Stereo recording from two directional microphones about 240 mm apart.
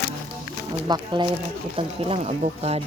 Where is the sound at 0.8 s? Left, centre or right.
Centre.